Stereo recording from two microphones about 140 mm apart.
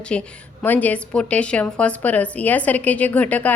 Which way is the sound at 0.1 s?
10° left (ahead or behind).